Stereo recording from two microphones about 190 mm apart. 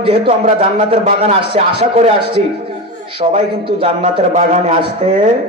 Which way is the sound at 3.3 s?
30° right (ahead or behind).